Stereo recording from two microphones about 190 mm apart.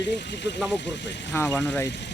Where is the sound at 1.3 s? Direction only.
15° left (ahead or behind).